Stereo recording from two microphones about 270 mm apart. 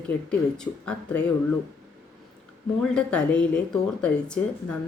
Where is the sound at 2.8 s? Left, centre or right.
Centre.